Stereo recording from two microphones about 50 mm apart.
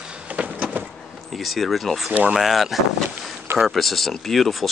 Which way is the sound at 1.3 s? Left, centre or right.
Centre.